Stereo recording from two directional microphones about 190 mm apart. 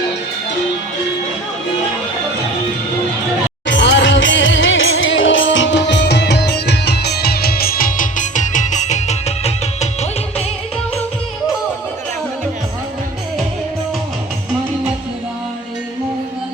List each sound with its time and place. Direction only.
3.7 s music: 70° left (ahead or behind); by 10.4 s 35° left (ahead or behind)